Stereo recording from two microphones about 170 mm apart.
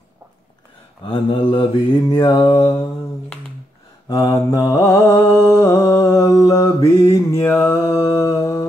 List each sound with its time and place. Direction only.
1.0 s mantra: 25° left (ahead or behind)
4.1 s mantra: 20° left (ahead or behind)
8.4 s a sound: 20° left (ahead or behind)